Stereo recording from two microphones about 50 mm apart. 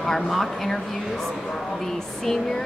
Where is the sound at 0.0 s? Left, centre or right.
Centre.